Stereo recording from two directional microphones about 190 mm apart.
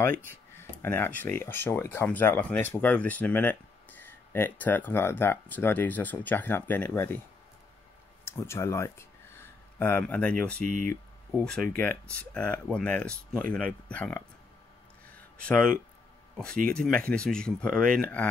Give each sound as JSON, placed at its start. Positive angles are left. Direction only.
{"t": 0.6, "sound": "speech", "side_deg": 10}
{"t": 8.3, "sound": "speech", "side_deg": 15}
{"t": 10.7, "sound": "speech", "side_deg": -45}
{"t": 11.3, "sound": "speech", "side_deg": 5}
{"t": 15.4, "sound": "speech", "side_deg": 5}
{"t": 16.7, "sound": "speech", "side_deg": 5}